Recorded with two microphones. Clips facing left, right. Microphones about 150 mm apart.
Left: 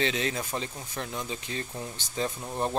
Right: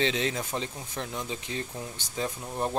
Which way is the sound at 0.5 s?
Centre (ahead or behind).